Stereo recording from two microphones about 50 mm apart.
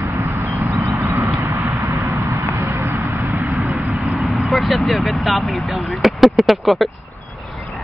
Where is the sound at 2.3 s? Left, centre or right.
Right.